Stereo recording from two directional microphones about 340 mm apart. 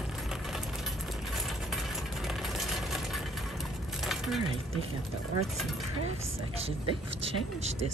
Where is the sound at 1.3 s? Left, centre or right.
Centre.